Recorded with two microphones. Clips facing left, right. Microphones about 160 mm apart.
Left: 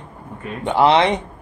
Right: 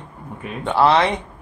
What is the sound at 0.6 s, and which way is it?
Speech, 15° left (ahead or behind).